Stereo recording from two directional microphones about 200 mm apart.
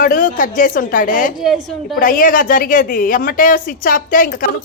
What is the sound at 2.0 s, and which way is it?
Speech, 45° left (ahead or behind).